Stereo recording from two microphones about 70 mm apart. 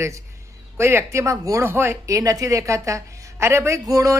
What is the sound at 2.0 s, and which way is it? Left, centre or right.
Speech, right.